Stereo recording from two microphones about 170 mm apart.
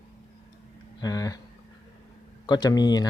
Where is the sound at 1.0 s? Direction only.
20° left (ahead or behind).